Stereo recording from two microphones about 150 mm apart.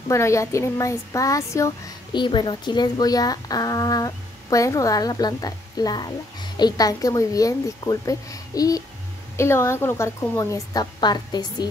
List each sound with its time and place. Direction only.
0.1 s speech: 20° left (ahead or behind)